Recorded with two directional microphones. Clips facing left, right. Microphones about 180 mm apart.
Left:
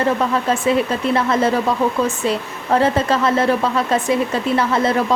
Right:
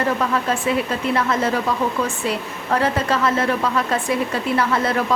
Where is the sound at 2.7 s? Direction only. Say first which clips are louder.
Left 4 dB; 25° left (ahead or behind).